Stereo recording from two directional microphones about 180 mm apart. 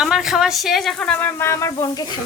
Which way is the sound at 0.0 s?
5° right (ahead or behind).